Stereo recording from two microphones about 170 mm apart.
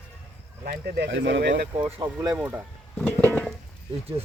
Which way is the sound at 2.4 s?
10° right (ahead or behind).